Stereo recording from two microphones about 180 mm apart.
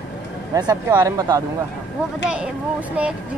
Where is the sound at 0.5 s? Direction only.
20° right (ahead or behind).